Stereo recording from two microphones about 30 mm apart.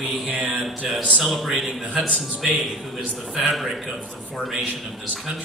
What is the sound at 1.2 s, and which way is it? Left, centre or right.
A man's voice, centre.